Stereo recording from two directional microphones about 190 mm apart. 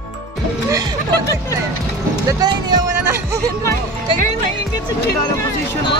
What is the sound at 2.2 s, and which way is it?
Speech, 20° right (ahead or behind).